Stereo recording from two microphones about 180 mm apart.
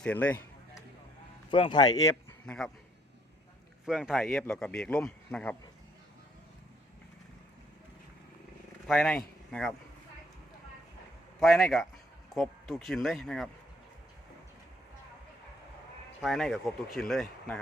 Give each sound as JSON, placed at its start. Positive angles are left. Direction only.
{"t": 0.0, "sound": "speech", "side_deg": 10}
{"t": 1.5, "sound": "speech", "side_deg": 25}
{"t": 2.5, "sound": "speech", "side_deg": 5}
{"t": 3.8, "sound": "speech", "side_deg": 0}
{"t": 8.9, "sound": "speech", "side_deg": 5}
{"t": 11.3, "sound": "speech", "side_deg": 0}
{"t": 16.2, "sound": "speech", "side_deg": 0}